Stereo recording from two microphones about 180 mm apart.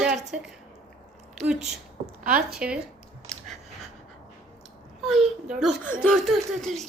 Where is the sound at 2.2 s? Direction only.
50° right (ahead or behind).